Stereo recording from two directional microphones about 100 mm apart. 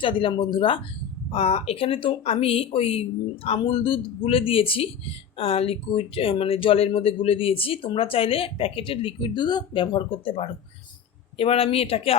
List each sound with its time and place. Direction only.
0.0 s speech: 60° left (ahead or behind)
1.3 s speech: 85° left
3.6 s speech: 60° left (ahead or behind)
11.3 s speech: 75° left (ahead or behind)